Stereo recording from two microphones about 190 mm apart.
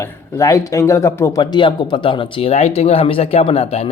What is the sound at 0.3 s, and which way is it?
Speech, 15° left (ahead or behind).